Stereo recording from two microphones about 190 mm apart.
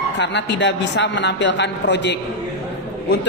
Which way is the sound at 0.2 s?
65° left (ahead or behind).